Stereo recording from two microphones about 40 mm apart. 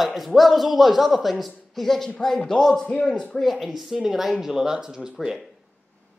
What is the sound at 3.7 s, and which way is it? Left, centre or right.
Speech, centre.